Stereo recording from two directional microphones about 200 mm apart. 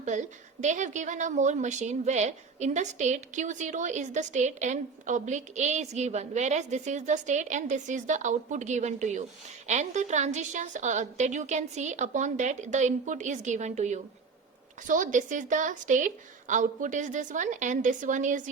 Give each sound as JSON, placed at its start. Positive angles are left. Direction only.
{"t": 0.0, "sound": "a woman's voice", "side_deg": -35}